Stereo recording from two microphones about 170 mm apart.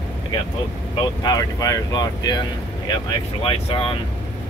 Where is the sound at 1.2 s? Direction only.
20° left (ahead or behind).